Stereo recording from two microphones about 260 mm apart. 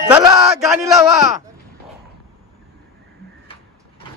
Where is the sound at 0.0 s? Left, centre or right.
Centre.